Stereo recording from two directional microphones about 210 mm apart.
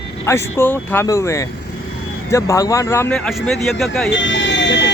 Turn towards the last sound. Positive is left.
turn(degrees=55)  # may be behind; listen again after turning